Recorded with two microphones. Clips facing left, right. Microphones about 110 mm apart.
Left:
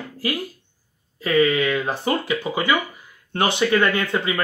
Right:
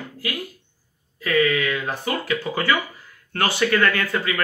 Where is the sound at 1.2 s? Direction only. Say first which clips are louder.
Left 2 dB; 25° left (ahead or behind).